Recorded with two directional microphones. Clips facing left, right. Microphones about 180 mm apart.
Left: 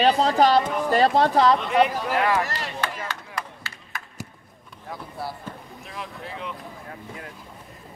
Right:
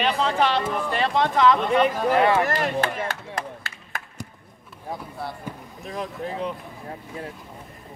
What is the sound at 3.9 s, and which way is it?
Basketball bounce, 50° right (ahead or behind).